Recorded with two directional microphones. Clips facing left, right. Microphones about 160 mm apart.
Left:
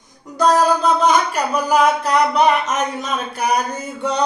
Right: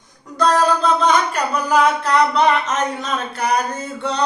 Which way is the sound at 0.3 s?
10° left (ahead or behind).